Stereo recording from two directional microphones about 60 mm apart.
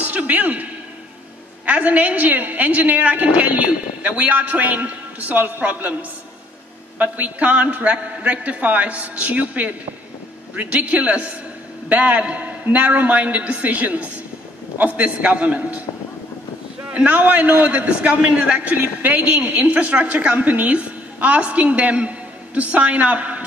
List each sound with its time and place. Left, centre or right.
0.0 s a sound: right
1.7 s a woman's voice: right
7.0 s a woman's voice: right
16.9 s a woman's voice: right